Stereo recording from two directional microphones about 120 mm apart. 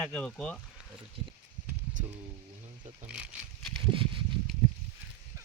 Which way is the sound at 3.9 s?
45° right (ahead or behind).